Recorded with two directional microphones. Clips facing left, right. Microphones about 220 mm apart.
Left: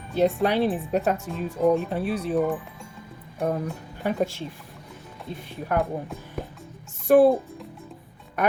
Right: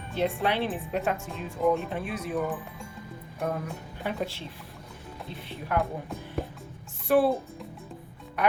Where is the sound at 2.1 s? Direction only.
30° left (ahead or behind).